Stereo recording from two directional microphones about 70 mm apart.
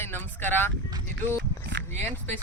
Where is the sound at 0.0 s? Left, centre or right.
Left.